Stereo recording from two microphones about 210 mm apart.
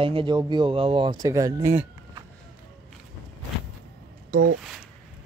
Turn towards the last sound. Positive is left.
turn(degrees=-40)  # may be behind; listen again after turning